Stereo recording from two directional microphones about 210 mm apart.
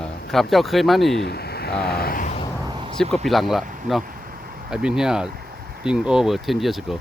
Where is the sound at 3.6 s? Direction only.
40° right (ahead or behind).